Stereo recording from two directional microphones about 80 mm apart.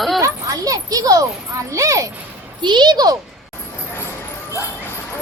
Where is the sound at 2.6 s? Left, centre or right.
Right.